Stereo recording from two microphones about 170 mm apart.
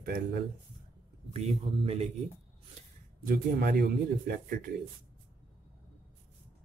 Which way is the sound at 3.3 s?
60° right (ahead or behind).